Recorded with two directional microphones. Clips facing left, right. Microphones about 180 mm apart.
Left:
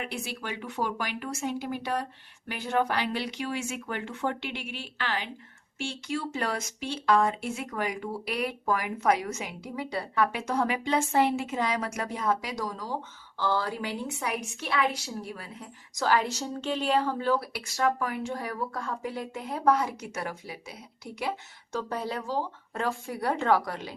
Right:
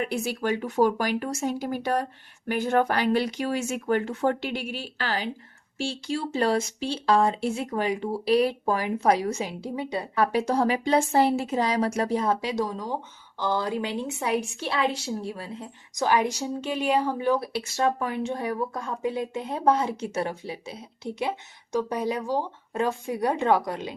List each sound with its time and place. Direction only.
0.0 s speech: 40° right (ahead or behind); by 10.1 s 20° right (ahead or behind)
10.2 s a woman's voice: 35° right (ahead or behind)